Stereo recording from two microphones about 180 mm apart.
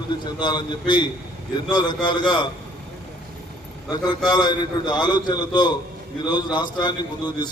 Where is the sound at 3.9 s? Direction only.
25° left (ahead or behind).